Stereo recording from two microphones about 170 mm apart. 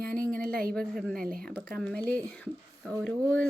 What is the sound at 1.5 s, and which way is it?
Speech, 5° left (ahead or behind).